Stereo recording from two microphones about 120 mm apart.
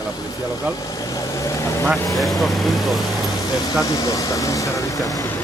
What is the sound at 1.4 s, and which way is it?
Vehicle, 25° left (ahead or behind).